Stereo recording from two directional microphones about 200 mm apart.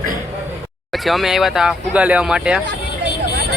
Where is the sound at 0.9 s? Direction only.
Centre (ahead or behind).